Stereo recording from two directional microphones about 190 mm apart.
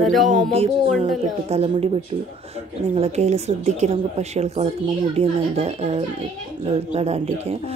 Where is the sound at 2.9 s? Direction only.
35° right (ahead or behind).